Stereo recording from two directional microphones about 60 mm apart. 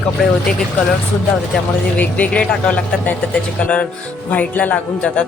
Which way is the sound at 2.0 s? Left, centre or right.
Left.